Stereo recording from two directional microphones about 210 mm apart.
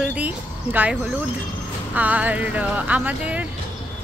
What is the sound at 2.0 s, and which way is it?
Speech, 10° right (ahead or behind).